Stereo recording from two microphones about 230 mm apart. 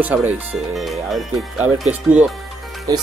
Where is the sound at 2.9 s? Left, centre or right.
Centre.